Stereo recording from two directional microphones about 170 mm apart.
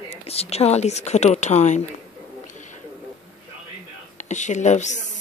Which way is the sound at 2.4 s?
45° left (ahead or behind).